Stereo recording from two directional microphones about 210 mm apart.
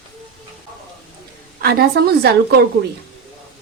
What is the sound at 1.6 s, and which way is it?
Speech, 45° right (ahead or behind).